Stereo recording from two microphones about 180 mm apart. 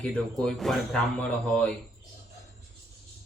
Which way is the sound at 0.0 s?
5° left (ahead or behind).